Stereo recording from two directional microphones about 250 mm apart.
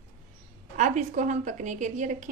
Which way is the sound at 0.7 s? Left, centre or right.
Right.